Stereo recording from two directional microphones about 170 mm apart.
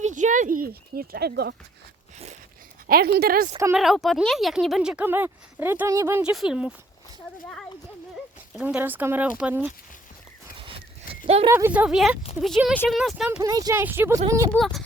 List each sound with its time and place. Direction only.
0.0 s speech: 45° right (ahead or behind); by 1.5 s 70° right (ahead or behind)
2.8 s a woman's voice: 65° right (ahead or behind)
3.8 s speech: centre (ahead or behind)
6.3 s speech: 5° right (ahead or behind)
8.5 s speech: 10° right (ahead or behind)
10.6 s horse: 30° right (ahead or behind)
11.4 s speech: 15° right (ahead or behind)
13.4 s speech: 20° right (ahead or behind)
14.5 s speech: centre (ahead or behind)